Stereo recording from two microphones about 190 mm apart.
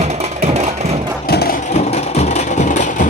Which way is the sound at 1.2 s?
55° left (ahead or behind).